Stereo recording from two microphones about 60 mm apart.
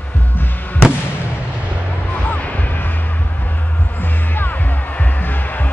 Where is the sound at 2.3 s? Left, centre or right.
Left.